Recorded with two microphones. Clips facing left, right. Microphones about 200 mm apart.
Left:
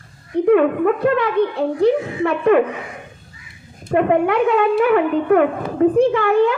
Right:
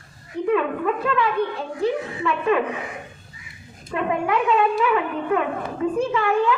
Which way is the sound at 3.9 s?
55° left (ahead or behind).